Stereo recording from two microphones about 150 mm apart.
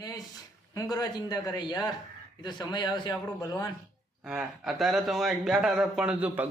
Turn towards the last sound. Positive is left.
turn(degrees=-10)  # may be behind; listen again after turning